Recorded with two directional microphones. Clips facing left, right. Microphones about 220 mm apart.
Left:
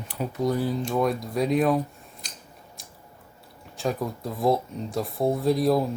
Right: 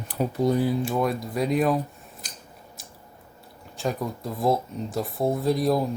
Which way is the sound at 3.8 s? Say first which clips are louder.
Even; centre (ahead or behind).